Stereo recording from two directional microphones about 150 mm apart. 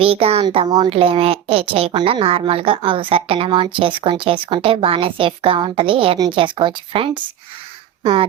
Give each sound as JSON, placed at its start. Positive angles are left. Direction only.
{"t": 0.0, "sound": "a child's voice", "side_deg": -40}